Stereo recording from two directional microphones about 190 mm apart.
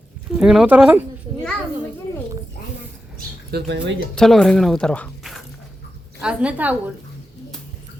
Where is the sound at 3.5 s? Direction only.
65° right (ahead or behind).